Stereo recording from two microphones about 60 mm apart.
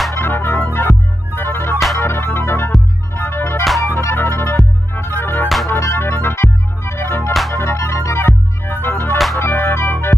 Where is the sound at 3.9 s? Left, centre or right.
Left.